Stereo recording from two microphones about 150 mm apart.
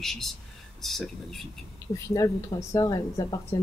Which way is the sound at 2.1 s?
20° left (ahead or behind).